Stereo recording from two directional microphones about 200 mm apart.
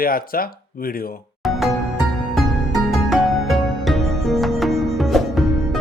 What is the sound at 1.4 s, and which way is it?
Music, centre (ahead or behind).